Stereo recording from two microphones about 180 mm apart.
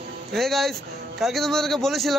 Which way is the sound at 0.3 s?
Centre (ahead or behind).